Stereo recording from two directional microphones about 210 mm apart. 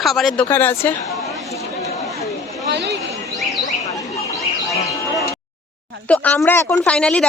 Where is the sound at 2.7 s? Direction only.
55° right (ahead or behind).